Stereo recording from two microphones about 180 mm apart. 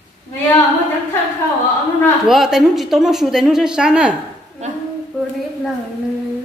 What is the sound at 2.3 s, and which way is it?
A woman's voice, centre (ahead or behind).